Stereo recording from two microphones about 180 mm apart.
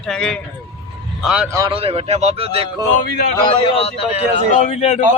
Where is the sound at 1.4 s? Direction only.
20° right (ahead or behind).